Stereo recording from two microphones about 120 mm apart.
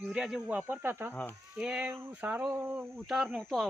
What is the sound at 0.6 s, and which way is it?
Speech, 15° right (ahead or behind).